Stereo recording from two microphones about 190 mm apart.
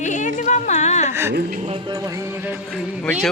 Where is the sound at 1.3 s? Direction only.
50° right (ahead or behind).